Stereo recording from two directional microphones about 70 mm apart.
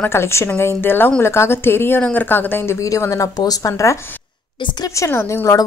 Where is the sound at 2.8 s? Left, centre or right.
Left.